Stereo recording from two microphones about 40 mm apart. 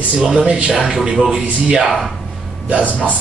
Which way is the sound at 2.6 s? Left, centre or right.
Right.